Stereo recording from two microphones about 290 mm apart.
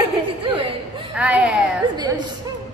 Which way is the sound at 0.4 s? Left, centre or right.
Centre.